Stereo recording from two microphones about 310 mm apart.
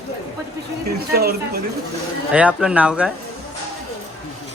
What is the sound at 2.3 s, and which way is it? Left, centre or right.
Speech, centre.